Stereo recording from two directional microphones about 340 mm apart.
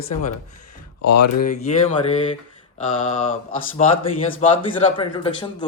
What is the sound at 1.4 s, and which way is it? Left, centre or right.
Mantra, left.